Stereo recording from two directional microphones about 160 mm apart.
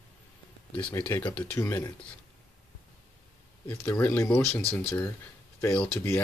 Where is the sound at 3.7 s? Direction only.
15° left (ahead or behind).